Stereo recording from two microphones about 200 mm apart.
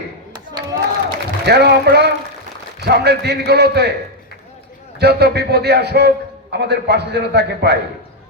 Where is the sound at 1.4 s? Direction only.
55° right (ahead or behind).